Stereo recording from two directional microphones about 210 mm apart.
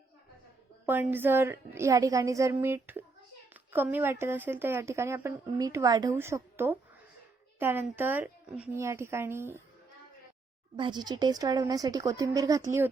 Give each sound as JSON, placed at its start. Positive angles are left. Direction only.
{"t": 0.9, "sound": "speech", "side_deg": -10}
{"t": 10.8, "sound": "speech", "side_deg": -20}